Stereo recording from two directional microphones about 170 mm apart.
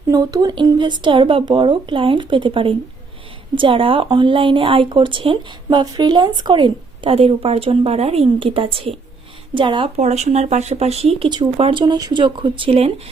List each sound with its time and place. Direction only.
0.1 s a woman's voice: 20° right (ahead or behind)
10.0 s a woman's voice: 40° right (ahead or behind)